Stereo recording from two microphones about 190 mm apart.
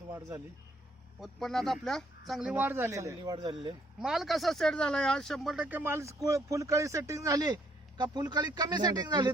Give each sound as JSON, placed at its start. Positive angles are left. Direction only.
{"t": 0.1, "sound": "speech", "side_deg": -15}
{"t": 1.2, "sound": "speech", "side_deg": 0}
{"t": 3.2, "sound": "speech", "side_deg": -25}
{"t": 4.0, "sound": "speech", "side_deg": 0}